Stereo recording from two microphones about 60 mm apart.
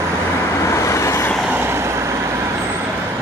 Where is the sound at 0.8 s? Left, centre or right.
Left.